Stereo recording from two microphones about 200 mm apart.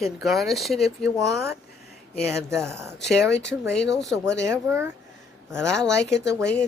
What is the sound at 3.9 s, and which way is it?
Speech, centre (ahead or behind).